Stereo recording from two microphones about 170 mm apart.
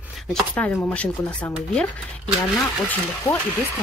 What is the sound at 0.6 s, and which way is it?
A woman's voice, 10° left (ahead or behind).